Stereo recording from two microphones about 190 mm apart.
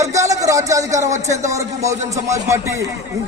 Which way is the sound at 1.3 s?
15° right (ahead or behind).